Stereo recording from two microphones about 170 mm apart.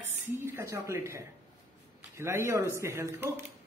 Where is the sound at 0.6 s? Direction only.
15° right (ahead or behind).